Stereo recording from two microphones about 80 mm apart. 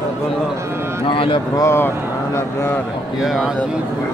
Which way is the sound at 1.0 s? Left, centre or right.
Left.